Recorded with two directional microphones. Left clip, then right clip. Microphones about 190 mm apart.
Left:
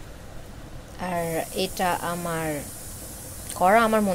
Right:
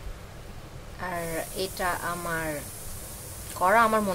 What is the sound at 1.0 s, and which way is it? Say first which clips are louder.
A woman's voice: left 4 dB; 15° left (ahead or behind).